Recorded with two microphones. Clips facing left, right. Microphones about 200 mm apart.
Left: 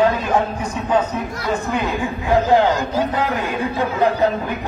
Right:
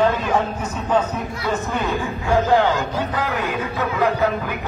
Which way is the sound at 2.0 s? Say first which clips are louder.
Left 3 dB; 15° left (ahead or behind).